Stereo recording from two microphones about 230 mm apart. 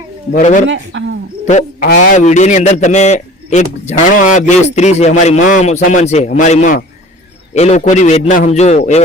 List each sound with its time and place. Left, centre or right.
0.3 s a man's voice: left
0.7 s speech: right
1.5 s a man's voice: left